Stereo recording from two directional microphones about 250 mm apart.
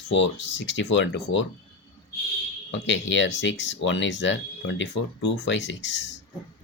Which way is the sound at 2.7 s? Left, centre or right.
Left.